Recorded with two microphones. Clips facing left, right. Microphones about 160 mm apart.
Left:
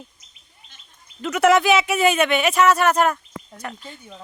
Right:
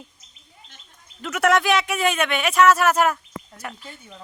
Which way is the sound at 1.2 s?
Centre (ahead or behind).